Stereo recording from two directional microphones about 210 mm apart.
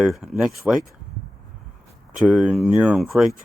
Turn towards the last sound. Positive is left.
turn(degrees=0)  # may be behind; listen again after turning